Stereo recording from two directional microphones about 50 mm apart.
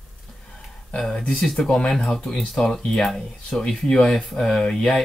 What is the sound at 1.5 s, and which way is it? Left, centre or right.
Speech, centre.